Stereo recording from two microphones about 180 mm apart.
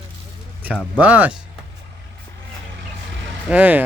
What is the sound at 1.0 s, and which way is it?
Speech, 10° right (ahead or behind).